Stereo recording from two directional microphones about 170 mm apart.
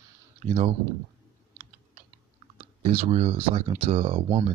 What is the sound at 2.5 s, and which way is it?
Speech, 40° right (ahead or behind).